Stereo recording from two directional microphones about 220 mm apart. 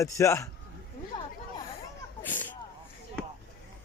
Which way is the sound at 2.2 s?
10° left (ahead or behind).